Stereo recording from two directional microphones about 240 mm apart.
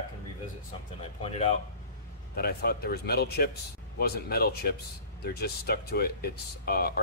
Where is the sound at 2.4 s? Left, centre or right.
Left.